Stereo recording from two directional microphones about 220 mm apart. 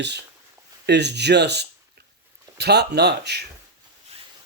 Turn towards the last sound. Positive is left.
turn(degrees=-50)  # may be behind; listen again after turning